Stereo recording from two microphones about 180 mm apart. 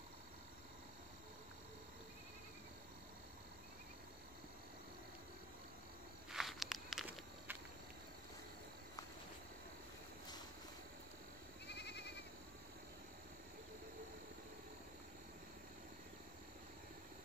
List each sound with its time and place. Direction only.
6.3 s walk: centre (ahead or behind)
11.6 s goat: 70° left (ahead or behind)